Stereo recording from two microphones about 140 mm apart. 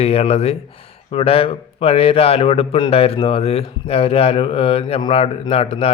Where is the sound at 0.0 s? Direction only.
45° left (ahead or behind).